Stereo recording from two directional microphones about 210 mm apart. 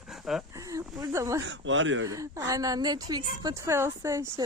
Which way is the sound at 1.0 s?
15° right (ahead or behind).